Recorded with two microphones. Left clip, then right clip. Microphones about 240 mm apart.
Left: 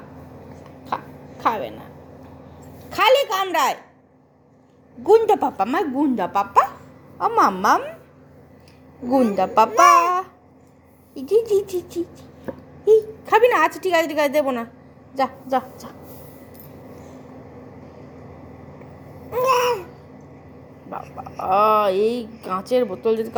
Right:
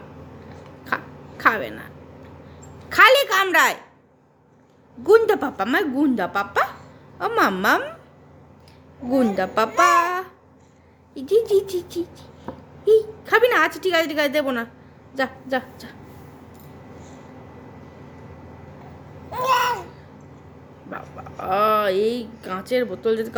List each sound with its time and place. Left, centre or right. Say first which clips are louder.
1.4 s speech: right 2 dB; centre
2.9 s speech: right 3 dB; centre
5.0 s speech: left 1 dB; centre
7.7 s speech: left 1 dB; centre
9.0 s speech: left 2 dB; centre
9.3 s a woman's voice: left 4 dB; centre
19.3 s babbling: left 2 dB; centre
20.9 s speech: left 3 dB; centre